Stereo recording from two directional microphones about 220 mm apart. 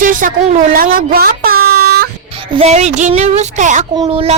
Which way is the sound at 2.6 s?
30° right (ahead or behind).